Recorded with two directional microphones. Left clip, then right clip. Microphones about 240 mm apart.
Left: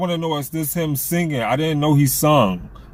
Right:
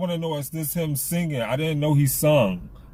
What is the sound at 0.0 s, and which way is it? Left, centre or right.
Speech, centre.